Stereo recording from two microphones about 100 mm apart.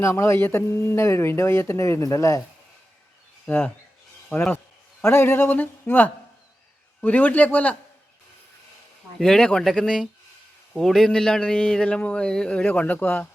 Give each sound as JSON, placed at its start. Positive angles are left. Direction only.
{"t": 0.0, "sound": "a man's voice", "side_deg": 30}
{"t": 3.4, "sound": "a man's voice", "side_deg": 20}
{"t": 9.1, "sound": "a man's voice", "side_deg": 5}